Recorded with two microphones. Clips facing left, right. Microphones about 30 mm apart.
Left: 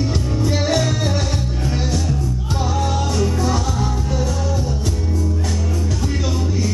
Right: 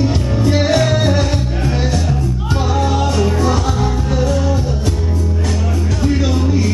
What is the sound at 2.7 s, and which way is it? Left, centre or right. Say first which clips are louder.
Music: right 5 dB; right.